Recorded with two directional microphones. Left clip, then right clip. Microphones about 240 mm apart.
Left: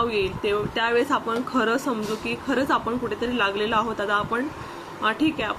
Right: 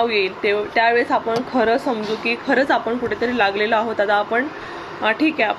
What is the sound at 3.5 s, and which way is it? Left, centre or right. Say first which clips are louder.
Speech: right 5 dB; centre.